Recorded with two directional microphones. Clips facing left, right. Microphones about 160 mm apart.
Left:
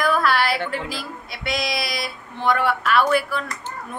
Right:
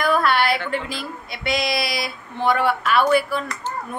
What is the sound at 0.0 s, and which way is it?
A woman's voice, centre (ahead or behind).